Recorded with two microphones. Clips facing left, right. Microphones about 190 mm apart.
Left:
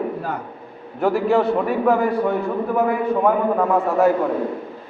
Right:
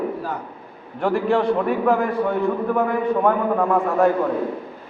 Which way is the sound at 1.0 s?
5° left (ahead or behind).